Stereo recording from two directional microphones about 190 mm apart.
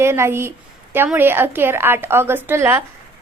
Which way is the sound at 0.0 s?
15° right (ahead or behind).